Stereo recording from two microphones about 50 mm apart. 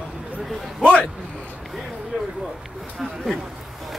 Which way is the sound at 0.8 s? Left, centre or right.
Left.